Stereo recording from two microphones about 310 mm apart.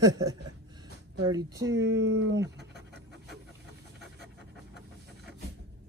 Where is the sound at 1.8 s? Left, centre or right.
Right.